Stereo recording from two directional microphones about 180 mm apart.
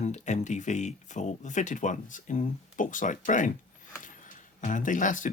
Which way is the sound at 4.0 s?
45° left (ahead or behind).